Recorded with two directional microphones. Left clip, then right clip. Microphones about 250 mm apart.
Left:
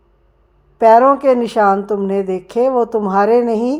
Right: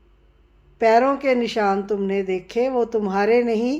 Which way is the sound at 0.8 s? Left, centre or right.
Left.